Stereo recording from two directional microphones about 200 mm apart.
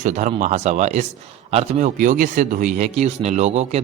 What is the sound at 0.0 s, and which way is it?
A man's voice, 35° right (ahead or behind).